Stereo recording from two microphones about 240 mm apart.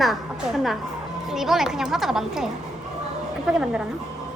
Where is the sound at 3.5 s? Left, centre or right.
Centre.